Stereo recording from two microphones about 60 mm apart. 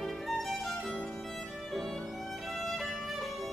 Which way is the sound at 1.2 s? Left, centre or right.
Centre.